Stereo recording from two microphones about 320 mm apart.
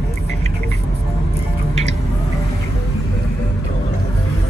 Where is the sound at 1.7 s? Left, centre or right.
Right.